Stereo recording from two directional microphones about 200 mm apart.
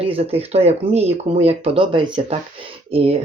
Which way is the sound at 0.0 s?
30° right (ahead or behind).